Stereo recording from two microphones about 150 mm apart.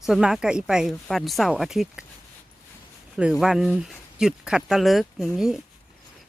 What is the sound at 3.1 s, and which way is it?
Speech, 5° right (ahead or behind).